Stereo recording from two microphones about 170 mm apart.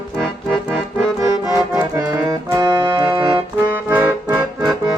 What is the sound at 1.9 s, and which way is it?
Music, 20° right (ahead or behind).